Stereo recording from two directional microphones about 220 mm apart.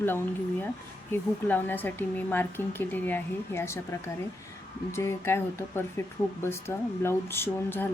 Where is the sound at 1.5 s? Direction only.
10° left (ahead or behind).